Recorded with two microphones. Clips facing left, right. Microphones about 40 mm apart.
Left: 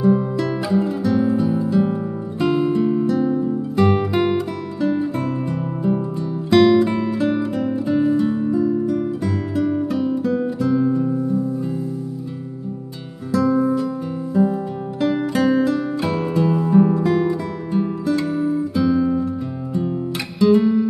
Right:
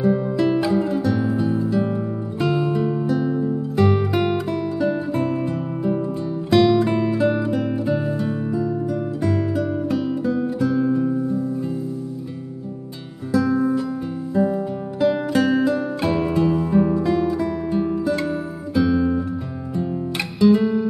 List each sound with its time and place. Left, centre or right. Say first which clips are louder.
0.0 s music: left 1 dB; centre
3.1 s music: left 2 dB; centre
6.5 s music: left 2 dB; centre
13.3 s music: left 1 dB; centre
17.1 s music: left 1 dB; centre
17.6 s music: left 3 dB; centre
18.8 s guitar: right 1 dB; centre
20.3 s music: left 1 dB; centre